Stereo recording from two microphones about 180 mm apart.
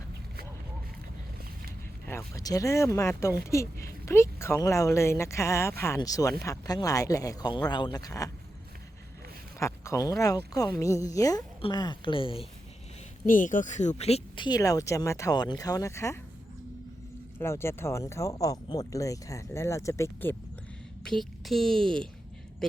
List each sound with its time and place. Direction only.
2.0 s speech: 15° left (ahead or behind)
9.6 s speech: 15° left (ahead or behind)
13.2 s speech: 45° left (ahead or behind); by 16.1 s 15° left (ahead or behind)
17.4 s speech: 15° left (ahead or behind)
21.0 s speech: centre (ahead or behind)